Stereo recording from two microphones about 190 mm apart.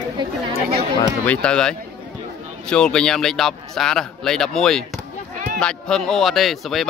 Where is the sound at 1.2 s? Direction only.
5° left (ahead or behind).